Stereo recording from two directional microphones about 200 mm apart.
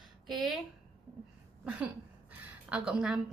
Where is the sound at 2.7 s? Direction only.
5° right (ahead or behind).